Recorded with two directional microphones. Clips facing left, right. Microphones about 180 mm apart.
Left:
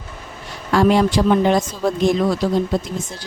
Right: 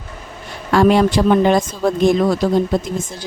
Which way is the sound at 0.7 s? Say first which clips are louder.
Right 2 dB; 60° right (ahead or behind).